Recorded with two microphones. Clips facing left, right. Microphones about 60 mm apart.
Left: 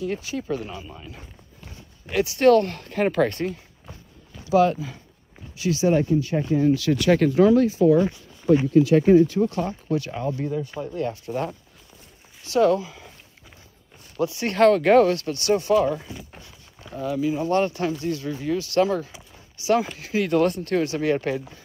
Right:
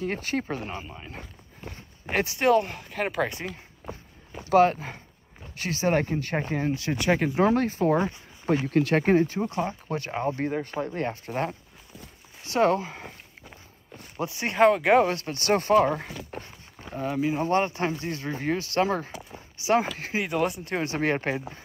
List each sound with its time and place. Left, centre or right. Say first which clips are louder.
0.0 s speech: left 1 dB; right
1.0 s walk: right 1 dB; right
2.3 s speech: left 6 dB; centre
3.5 s walk: right 5 dB; right
4.5 s speech: left 1 dB; right
7.4 s speech: left 5 dB; right
9.4 s speech: left 4 dB; right
14.1 s speech: left 5 dB; right
14.5 s speech: left 3 dB; centre
15.0 s speech: left 4 dB; right
19.3 s a sound: left 2 dB; right
20.2 s speech: left 6 dB; centre
20.7 s speech: left 4 dB; right